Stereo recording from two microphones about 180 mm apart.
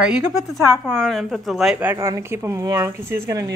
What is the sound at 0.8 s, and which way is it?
A woman's voice, centre (ahead or behind).